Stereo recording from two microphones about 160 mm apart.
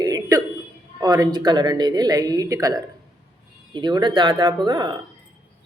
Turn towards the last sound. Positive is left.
turn(degrees=-25)  # may be behind; listen again after turning